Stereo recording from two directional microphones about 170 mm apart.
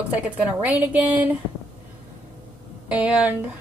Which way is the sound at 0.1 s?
10° right (ahead or behind).